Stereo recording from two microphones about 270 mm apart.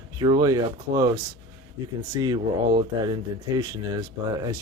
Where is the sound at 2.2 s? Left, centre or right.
Centre.